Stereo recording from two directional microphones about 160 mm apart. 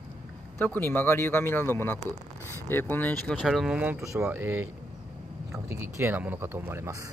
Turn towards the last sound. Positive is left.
turn(degrees=-20)  # may be behind; listen again after turning